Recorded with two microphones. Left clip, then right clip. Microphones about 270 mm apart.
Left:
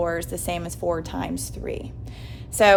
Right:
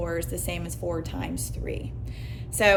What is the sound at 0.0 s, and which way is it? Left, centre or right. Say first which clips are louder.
A woman's voice: left 5 dB; left.